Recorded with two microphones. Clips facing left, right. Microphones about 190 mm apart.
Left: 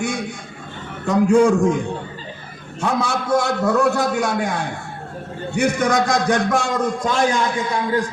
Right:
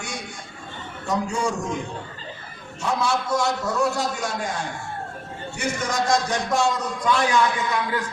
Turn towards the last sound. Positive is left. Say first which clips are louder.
# left 4 dB
turn(degrees=35)  # may be behind; listen again after turning